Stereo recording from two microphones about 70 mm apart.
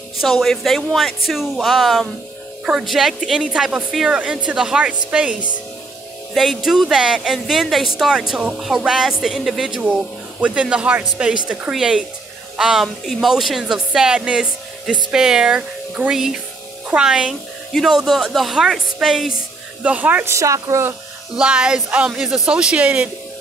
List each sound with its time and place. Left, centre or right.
0.2 s speech: centre
6.3 s speech: centre
19.8 s speech: right
20.2 s speech: right
21.4 s speech: centre